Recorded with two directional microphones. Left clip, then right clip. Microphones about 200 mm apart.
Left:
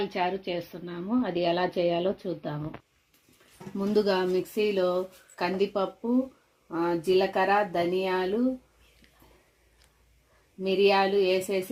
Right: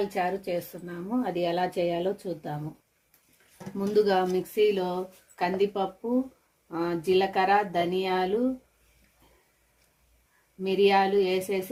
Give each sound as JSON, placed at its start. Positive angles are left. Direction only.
{"t": 0.1, "sound": "a woman's voice", "side_deg": 30}
{"t": 3.8, "sound": "a woman's voice", "side_deg": 30}
{"t": 10.6, "sound": "a woman's voice", "side_deg": 25}